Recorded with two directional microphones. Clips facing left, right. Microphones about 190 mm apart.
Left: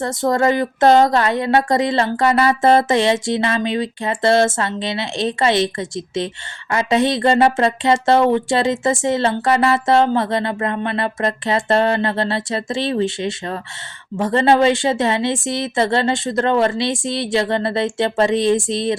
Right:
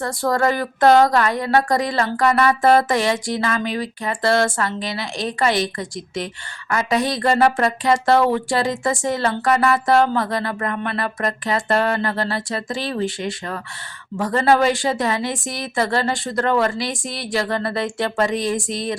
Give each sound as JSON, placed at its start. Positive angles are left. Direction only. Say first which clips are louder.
{"t": 0.0, "sound": "speech", "louder": "left 3 dB", "side_deg": 20}